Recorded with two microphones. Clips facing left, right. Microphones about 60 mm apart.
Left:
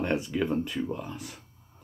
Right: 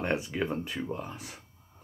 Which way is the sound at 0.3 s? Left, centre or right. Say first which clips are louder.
Left 4 dB; right.